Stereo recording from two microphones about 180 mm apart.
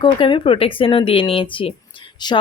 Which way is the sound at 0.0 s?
25° left (ahead or behind).